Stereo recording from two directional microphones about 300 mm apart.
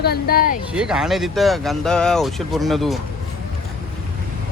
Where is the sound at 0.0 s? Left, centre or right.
Left.